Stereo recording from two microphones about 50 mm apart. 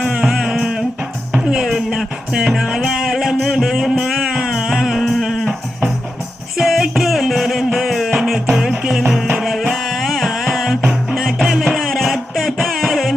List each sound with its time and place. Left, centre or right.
0.0 s a sound: centre
1.5 s music: centre
6.6 s music: centre